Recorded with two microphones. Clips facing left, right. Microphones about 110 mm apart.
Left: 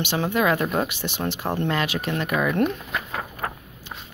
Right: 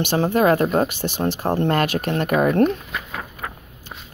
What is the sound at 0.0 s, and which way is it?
Speech, 45° right (ahead or behind).